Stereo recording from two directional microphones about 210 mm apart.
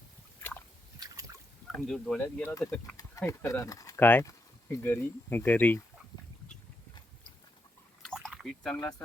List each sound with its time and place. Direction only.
0.9 s boat: 15° right (ahead or behind)
1.7 s speech: centre (ahead or behind)
8.0 s liquid: centre (ahead or behind)
8.7 s speech: 15° left (ahead or behind)